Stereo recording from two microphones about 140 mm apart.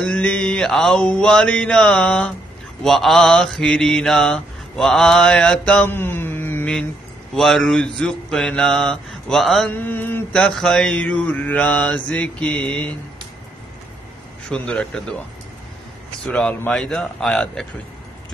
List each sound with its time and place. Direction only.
0.0 s mantra: 5° left (ahead or behind)
9.7 s mantra: 15° left (ahead or behind)
14.5 s mantra: 5° left (ahead or behind)
16.3 s mantra: 5° left (ahead or behind)